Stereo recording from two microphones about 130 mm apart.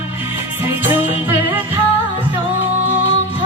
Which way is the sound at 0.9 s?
15° right (ahead or behind).